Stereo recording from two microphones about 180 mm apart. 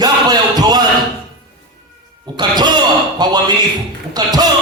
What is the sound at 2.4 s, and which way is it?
A man's voice, 25° right (ahead or behind).